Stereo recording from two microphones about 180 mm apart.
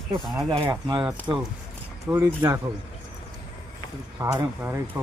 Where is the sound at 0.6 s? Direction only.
20° right (ahead or behind).